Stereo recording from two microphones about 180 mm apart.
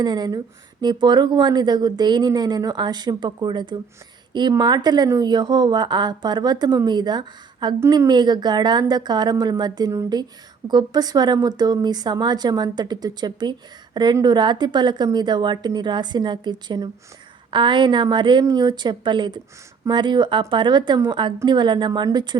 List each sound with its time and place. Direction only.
0.0 s speech: 25° right (ahead or behind)